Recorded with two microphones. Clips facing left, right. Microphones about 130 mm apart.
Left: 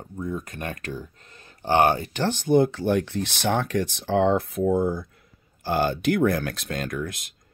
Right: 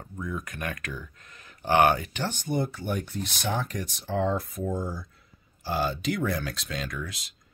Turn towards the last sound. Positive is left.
turn(degrees=50)  # may be behind; listen again after turning